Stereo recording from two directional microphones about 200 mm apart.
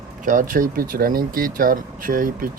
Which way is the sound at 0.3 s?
40° right (ahead or behind).